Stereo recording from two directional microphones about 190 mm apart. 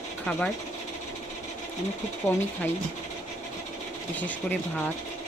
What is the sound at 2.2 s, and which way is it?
Speech, 15° left (ahead or behind).